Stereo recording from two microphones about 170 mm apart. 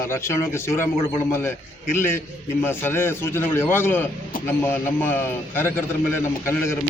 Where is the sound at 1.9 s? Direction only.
15° left (ahead or behind).